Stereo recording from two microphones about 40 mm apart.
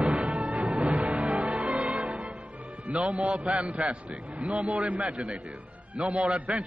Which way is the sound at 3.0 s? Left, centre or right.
Centre.